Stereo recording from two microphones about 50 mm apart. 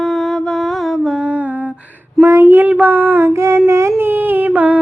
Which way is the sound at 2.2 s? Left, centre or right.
Right.